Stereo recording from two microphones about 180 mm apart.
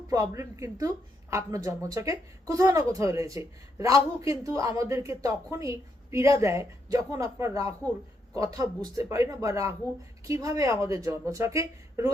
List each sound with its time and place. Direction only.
0.1 s a woman's voice: 15° right (ahead or behind)